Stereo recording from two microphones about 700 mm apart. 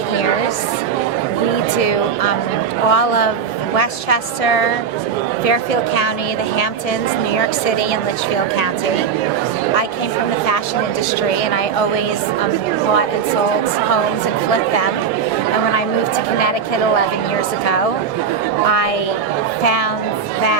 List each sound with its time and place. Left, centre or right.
2.9 s a woman's voice: left